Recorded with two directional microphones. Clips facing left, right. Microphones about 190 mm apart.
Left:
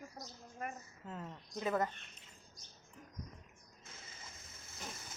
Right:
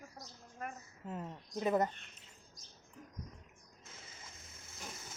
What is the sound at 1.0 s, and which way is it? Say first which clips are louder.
Speech: right 4 dB; 15° right (ahead or behind).